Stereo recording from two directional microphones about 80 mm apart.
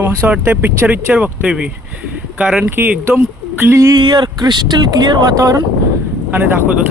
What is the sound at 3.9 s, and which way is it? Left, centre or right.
Speech, right.